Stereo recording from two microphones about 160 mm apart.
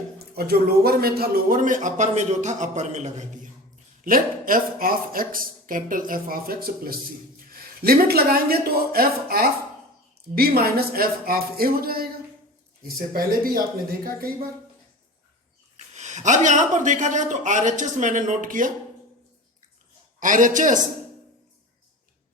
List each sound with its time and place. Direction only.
0.2 s a man's voice: 75° right (ahead or behind); by 3.5 s 45° right (ahead or behind)
4.0 s a man's voice: 60° right (ahead or behind)
13.1 s a man's voice: 65° right (ahead or behind)
16.0 s a man's voice: 45° right (ahead or behind)
20.1 s a man's voice: 55° right (ahead or behind)